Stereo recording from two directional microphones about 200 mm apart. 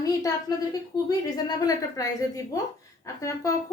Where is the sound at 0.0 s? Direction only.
20° left (ahead or behind).